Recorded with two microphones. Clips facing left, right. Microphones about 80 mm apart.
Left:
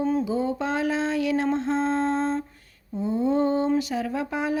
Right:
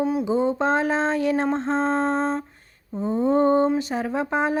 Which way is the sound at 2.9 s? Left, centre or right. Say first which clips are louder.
Right 3 dB; right.